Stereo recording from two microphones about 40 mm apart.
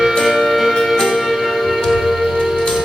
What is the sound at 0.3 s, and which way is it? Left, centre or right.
Music, centre.